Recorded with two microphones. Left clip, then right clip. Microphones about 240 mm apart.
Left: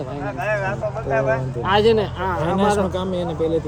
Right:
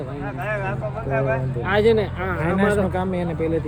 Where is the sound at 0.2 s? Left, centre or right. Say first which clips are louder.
Left 4 dB; left.